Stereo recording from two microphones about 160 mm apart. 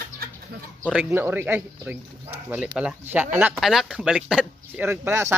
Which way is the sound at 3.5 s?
Centre (ahead or behind).